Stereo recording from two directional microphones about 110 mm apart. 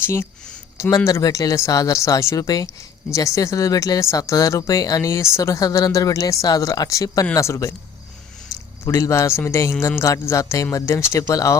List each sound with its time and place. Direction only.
0.0 s speech: 25° left (ahead or behind)
8.8 s speech: 30° left (ahead or behind)